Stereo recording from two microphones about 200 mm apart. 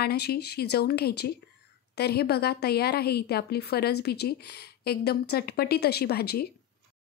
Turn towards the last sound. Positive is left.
turn(degrees=50)  # may be behind; listen again after turning